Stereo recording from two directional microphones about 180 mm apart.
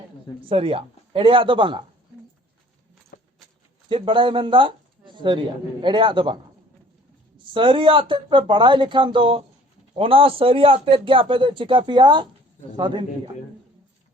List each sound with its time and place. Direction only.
0.4 s speech: 30° right (ahead or behind)
3.1 s keys jangling: 50° left (ahead or behind)
3.8 s speech: 30° right (ahead or behind)